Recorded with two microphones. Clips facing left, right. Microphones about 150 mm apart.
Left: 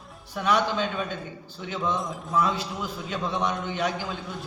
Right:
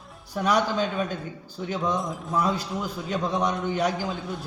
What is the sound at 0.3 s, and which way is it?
Speech, 40° right (ahead or behind).